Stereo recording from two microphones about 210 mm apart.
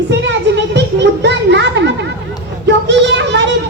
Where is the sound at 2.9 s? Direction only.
55° right (ahead or behind).